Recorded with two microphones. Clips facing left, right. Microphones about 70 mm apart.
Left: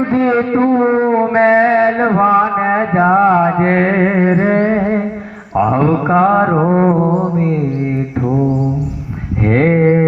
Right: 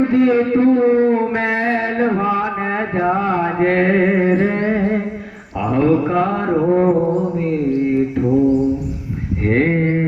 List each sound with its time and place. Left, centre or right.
0.0 s a sound: left
0.9 s mantra: left
3.0 s music: left
5.5 s mantra: left
6.8 s mantra: left
9.5 s a sound: left